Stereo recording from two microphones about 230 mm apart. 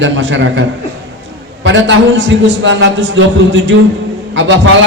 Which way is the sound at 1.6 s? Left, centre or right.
Right.